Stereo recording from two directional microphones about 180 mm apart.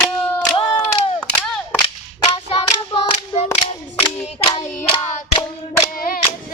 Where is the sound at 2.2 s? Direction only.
30° left (ahead or behind).